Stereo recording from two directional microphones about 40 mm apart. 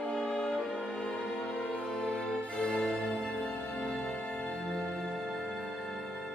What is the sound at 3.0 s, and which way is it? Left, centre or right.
Music, centre.